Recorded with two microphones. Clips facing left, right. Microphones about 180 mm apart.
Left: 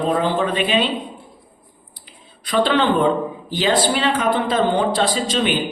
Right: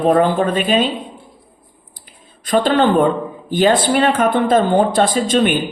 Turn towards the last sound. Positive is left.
turn(degrees=-50)  # may be behind; listen again after turning